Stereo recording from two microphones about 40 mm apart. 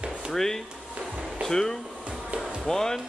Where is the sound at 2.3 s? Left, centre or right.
Right.